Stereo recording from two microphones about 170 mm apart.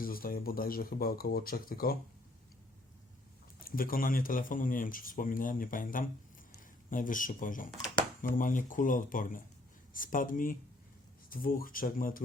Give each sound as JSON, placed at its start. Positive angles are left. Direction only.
{"t": 0.0, "sound": "speech", "side_deg": 60}
{"t": 3.6, "sound": "speech", "side_deg": 55}